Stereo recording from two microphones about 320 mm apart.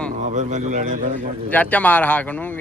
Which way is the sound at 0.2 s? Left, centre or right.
Right.